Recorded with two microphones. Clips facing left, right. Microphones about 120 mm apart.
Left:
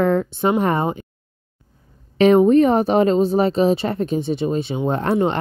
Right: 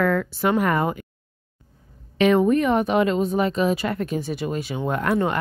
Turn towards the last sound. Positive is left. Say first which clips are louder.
# left 3 dB
turn(degrees=25)  # may be behind; listen again after turning